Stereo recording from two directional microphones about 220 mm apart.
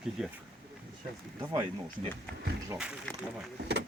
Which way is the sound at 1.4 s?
15° right (ahead or behind).